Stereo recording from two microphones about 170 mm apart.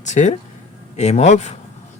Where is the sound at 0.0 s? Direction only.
45° left (ahead or behind).